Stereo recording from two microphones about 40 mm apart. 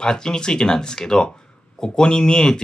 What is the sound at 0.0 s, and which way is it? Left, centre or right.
Speech, centre.